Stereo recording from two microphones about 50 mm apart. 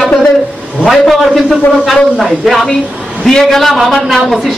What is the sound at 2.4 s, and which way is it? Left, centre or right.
A man's voice, centre.